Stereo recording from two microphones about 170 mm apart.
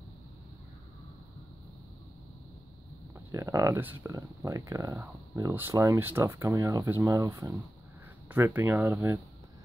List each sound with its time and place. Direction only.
3.3 s speech: 20° right (ahead or behind)